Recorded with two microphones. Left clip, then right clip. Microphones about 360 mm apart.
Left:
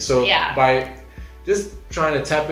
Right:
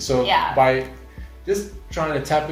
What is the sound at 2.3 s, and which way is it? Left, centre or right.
Speech, centre.